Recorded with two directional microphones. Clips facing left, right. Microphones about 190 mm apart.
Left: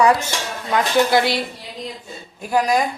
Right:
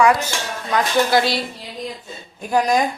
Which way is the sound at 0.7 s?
20° left (ahead or behind).